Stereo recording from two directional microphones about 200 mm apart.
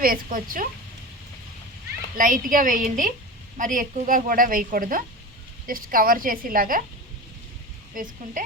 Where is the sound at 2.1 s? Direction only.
40° right (ahead or behind).